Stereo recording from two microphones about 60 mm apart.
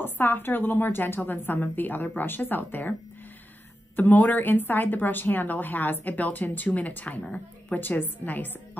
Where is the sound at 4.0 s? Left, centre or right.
Left.